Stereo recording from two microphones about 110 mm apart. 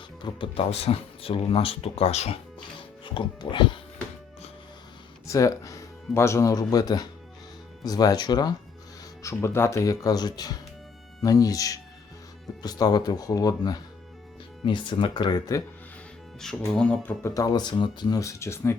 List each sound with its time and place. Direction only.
0.2 s speech: 45° left (ahead or behind); by 2.4 s 75° left (ahead or behind)
2.6 s music: 45° left (ahead or behind)
5.2 s speech: 30° left (ahead or behind)
9.2 s speech: 25° left (ahead or behind)
14.6 s speech: 50° left (ahead or behind)
16.4 s speech: 5° left (ahead or behind)
17.3 s speech: 35° left (ahead or behind)
18.2 s speech: 25° left (ahead or behind)